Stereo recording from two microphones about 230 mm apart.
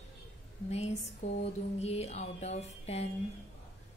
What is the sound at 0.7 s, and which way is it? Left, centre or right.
A woman's voice, left.